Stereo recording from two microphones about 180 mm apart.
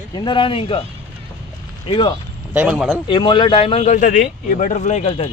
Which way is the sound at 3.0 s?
25° left (ahead or behind).